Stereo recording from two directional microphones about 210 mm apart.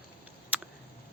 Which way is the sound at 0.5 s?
5° right (ahead or behind).